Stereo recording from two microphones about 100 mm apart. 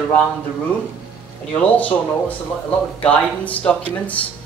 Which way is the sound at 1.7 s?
15° left (ahead or behind).